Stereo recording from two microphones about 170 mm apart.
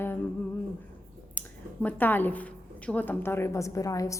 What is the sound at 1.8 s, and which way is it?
A woman's voice, 10° left (ahead or behind).